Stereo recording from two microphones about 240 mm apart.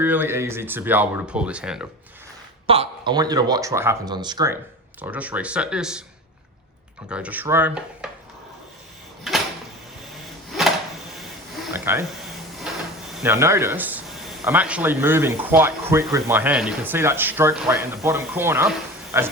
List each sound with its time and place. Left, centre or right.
0.0 s speech: centre
2.6 s speech: right
4.9 s speech: centre
7.1 s speech: centre
9.3 s a sound: centre
11.2 s a sound: centre
12.7 s drawer open or close: centre
13.1 s speech: centre